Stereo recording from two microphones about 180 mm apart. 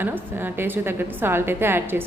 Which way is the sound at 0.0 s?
10° right (ahead or behind).